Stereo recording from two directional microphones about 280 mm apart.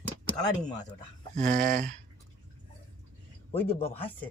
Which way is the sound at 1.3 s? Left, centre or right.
Right.